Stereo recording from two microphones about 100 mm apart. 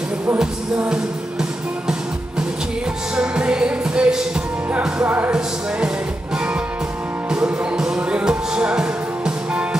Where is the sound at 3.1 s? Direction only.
10° right (ahead or behind).